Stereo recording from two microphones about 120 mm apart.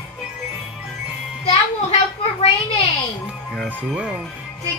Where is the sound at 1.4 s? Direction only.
60° left (ahead or behind).